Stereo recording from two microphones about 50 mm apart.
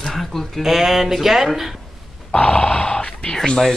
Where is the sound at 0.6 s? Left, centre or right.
Centre.